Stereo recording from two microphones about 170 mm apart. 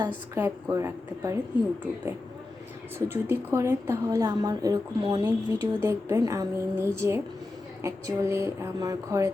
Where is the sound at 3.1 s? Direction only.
15° right (ahead or behind).